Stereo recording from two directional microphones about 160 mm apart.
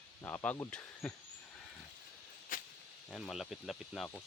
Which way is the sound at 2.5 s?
55° left (ahead or behind).